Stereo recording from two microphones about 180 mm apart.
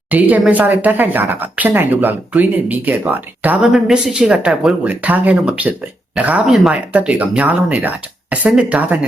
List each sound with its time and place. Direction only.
0.1 s speech: 10° right (ahead or behind)